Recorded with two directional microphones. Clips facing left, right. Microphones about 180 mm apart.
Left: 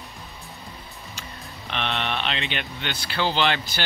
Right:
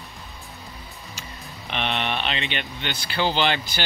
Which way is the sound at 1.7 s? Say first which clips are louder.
Right 1 dB; 5° right (ahead or behind).